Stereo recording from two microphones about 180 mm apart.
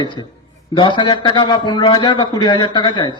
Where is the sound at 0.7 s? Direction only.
25° left (ahead or behind).